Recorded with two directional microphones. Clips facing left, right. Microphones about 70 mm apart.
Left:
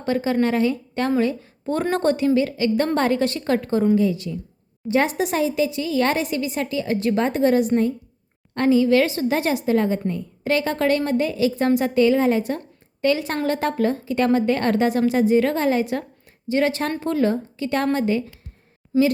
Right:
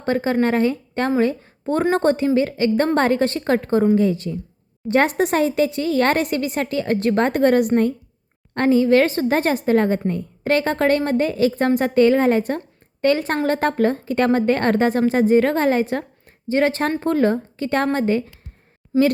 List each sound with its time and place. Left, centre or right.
0.0 s a woman's voice: right
8.5 s a woman's voice: right